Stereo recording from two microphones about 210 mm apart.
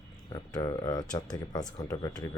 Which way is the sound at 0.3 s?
20° left (ahead or behind).